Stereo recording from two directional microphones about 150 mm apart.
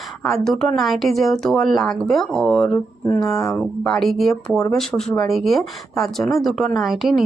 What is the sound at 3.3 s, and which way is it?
Speech, 20° left (ahead or behind).